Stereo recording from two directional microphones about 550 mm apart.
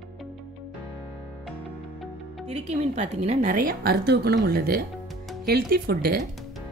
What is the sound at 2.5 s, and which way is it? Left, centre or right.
A woman's voice, centre.